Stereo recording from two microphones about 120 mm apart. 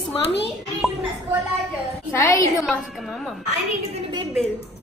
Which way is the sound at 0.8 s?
5° right (ahead or behind).